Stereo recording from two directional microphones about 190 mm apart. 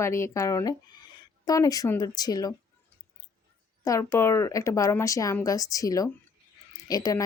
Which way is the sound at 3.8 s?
15° left (ahead or behind).